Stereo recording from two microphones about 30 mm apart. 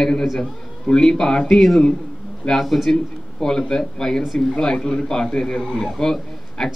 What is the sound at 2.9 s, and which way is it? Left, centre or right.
A man's voice, centre.